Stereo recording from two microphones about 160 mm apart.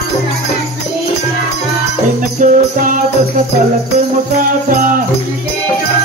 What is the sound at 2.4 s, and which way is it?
Music, 55° right (ahead or behind).